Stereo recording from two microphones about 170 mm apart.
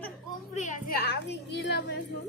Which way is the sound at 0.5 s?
45° left (ahead or behind).